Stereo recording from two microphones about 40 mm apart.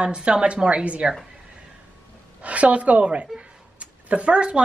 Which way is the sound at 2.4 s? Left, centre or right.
Right.